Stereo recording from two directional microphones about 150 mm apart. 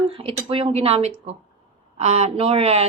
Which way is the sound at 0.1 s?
35° right (ahead or behind).